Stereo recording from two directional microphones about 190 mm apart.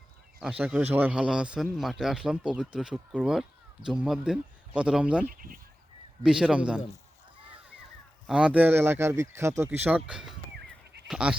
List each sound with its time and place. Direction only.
0.3 s a man's voice: 5° right (ahead or behind)
5.2 s speech: 45° right (ahead or behind)
6.2 s a man's voice: 5° right (ahead or behind)
8.3 s a man's voice: 5° right (ahead or behind)